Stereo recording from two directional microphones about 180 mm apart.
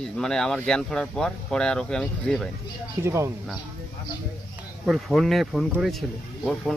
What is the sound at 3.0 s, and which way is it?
Speech, 15° right (ahead or behind).